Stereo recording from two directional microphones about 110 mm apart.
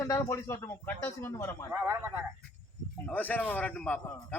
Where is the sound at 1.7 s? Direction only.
20° right (ahead or behind).